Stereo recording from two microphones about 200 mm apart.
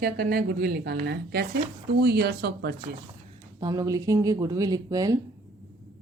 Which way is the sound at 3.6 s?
20° right (ahead or behind).